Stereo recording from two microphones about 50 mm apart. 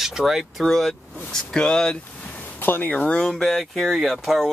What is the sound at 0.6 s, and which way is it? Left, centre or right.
Speech, centre.